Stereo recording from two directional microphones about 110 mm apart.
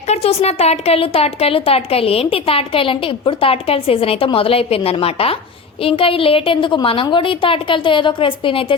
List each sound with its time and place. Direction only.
0.1 s a woman's voice: 65° left (ahead or behind)